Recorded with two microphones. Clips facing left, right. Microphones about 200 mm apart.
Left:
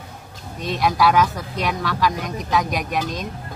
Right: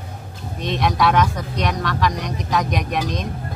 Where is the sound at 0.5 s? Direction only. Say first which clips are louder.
Even; centre (ahead or behind).